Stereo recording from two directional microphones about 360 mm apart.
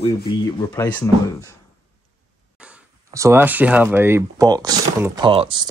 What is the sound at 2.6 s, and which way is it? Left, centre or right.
Speech, centre.